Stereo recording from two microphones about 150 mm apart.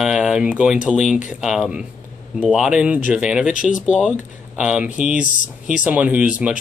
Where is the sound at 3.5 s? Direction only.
60° left (ahead or behind).